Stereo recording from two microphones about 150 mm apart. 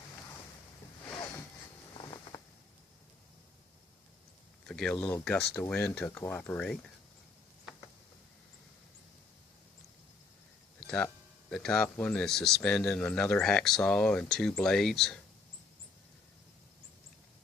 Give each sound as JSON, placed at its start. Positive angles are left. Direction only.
{"t": 1.9, "sound": "a sound", "side_deg": 35}
{"t": 4.6, "sound": "speech", "side_deg": 5}
{"t": 10.8, "sound": "music", "side_deg": 5}
{"t": 11.5, "sound": "speech", "side_deg": 5}